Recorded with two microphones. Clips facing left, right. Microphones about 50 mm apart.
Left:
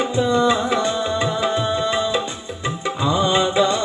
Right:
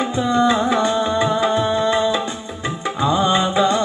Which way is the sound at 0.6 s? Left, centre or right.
Right.